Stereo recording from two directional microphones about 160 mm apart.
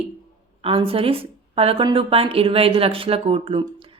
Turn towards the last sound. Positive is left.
turn(degrees=-35)  # may be behind; listen again after turning